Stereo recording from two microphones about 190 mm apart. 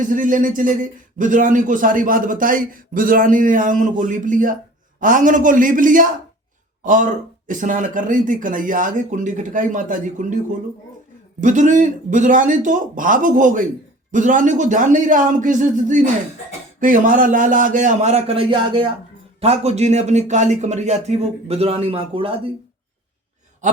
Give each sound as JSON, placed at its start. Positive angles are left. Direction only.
{"t": 0.0, "sound": "a man's voice", "side_deg": -45}